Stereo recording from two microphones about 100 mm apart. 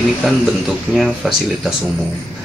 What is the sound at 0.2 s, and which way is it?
Speech, centre (ahead or behind).